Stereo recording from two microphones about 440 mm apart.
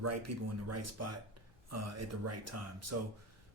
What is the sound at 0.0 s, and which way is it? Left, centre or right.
Speech, right.